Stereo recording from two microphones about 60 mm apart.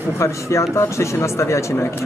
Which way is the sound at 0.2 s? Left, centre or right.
Left.